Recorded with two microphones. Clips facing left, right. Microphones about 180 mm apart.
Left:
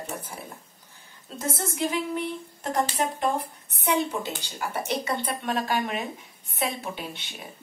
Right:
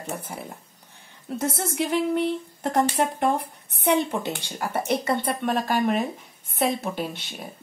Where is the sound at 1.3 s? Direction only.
65° right (ahead or behind); by 6.1 s 45° right (ahead or behind).